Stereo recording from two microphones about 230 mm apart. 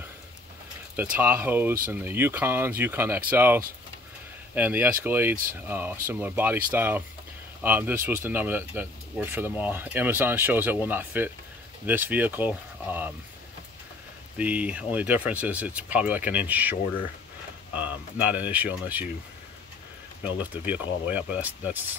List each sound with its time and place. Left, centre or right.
0.9 s speech: centre
14.4 s speech: centre
17.7 s speech: centre
20.6 s speech: centre